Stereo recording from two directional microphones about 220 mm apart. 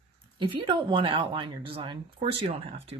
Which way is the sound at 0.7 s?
20° right (ahead or behind).